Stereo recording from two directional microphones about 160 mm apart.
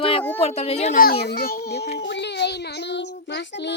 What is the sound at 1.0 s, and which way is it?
Speech, 75° left (ahead or behind).